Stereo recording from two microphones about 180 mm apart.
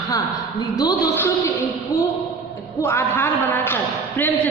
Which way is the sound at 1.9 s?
15° left (ahead or behind).